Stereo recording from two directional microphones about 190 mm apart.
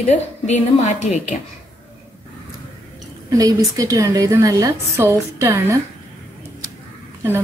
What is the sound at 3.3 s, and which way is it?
A woman's voice, 15° right (ahead or behind).